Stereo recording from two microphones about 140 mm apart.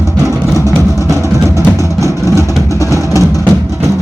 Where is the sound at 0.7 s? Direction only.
20° left (ahead or behind).